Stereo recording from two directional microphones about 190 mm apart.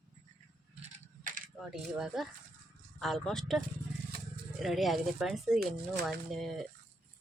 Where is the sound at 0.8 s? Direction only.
45° right (ahead or behind).